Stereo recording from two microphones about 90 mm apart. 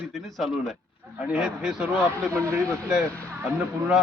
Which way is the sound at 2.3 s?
30° right (ahead or behind).